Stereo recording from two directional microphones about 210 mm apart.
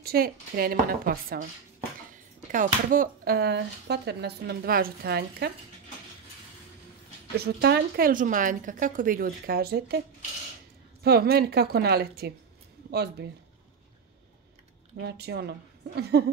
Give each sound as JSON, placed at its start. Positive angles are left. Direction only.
{"t": 0.0, "sound": "speech", "side_deg": -45}
{"t": 7.3, "sound": "speech", "side_deg": -50}
{"t": 15.0, "sound": "speech", "side_deg": -50}